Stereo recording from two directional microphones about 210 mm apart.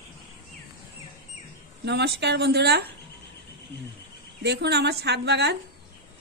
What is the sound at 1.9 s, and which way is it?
A woman's voice, 55° right (ahead or behind).